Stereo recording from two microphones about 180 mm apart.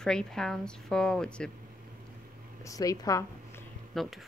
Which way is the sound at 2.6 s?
20° left (ahead or behind).